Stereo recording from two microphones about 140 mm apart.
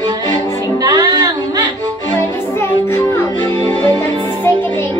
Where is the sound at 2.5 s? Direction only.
20° left (ahead or behind).